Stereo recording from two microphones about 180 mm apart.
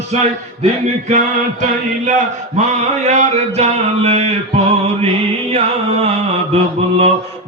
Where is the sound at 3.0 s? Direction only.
40° right (ahead or behind).